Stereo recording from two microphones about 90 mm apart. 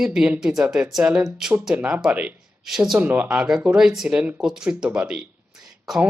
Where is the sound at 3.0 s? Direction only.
20° right (ahead or behind).